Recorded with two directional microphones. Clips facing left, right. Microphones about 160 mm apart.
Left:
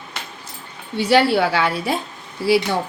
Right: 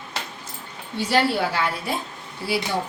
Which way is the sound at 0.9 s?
70° left (ahead or behind).